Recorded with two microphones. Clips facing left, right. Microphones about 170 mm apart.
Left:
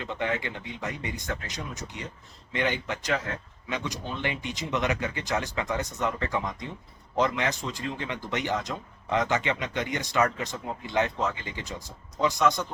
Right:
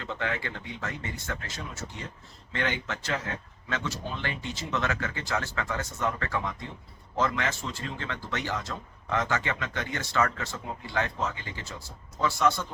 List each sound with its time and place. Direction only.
0.0 s speech: 15° left (ahead or behind)